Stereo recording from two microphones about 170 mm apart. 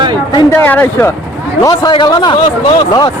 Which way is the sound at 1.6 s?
25° left (ahead or behind).